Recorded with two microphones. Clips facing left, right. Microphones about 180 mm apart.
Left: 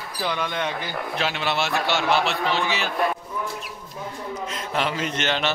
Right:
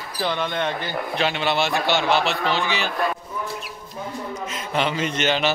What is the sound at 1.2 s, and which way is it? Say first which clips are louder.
A man's voice: right 3 dB; centre (ahead or behind).